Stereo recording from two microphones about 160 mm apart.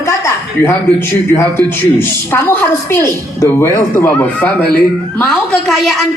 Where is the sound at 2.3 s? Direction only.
15° left (ahead or behind).